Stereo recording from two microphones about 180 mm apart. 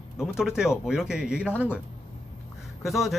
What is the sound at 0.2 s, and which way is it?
Speech, 5° right (ahead or behind).